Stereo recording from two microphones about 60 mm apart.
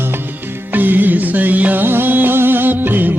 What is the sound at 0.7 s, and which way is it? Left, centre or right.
Music, right.